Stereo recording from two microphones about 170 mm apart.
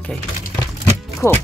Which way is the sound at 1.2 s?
15° left (ahead or behind).